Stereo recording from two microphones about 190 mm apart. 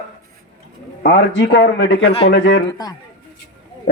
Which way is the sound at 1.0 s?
70° left (ahead or behind).